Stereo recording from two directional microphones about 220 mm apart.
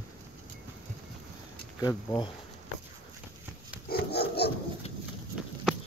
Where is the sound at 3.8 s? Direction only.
45° left (ahead or behind).